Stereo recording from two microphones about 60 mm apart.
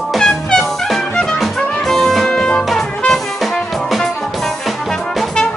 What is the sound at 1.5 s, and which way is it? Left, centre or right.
Music, left.